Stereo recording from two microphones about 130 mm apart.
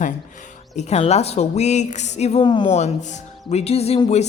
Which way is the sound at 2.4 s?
35° left (ahead or behind).